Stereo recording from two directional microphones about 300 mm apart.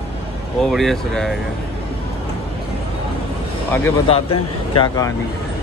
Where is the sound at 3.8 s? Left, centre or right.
Centre.